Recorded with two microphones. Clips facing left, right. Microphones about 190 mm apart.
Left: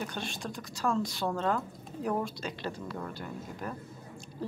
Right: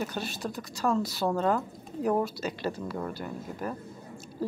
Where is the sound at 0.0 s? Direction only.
5° right (ahead or behind).